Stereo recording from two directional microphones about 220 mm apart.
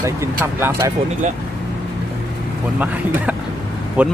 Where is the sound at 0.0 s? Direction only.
15° right (ahead or behind).